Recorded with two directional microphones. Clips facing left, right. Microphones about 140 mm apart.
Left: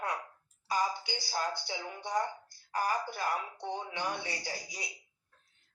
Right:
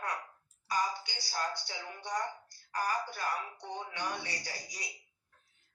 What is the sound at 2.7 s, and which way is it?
Speech, 25° left (ahead or behind).